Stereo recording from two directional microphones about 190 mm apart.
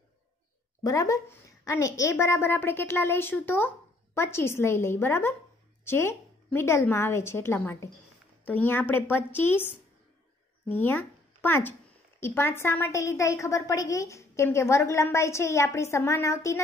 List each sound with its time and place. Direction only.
0.8 s a woman's voice: 15° left (ahead or behind)